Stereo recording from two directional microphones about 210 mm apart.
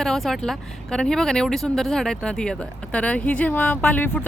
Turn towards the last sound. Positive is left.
turn(degrees=5)  # may be behind; listen again after turning